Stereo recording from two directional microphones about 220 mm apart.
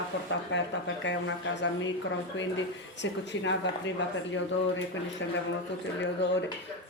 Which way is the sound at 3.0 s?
55° left (ahead or behind).